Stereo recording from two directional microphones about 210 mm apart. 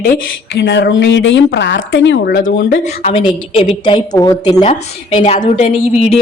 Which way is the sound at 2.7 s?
30° left (ahead or behind).